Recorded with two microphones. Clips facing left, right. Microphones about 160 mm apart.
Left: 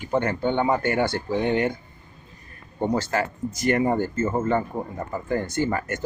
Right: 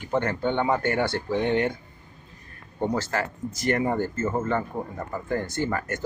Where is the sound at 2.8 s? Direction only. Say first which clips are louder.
Left 2 dB; 20° left (ahead or behind).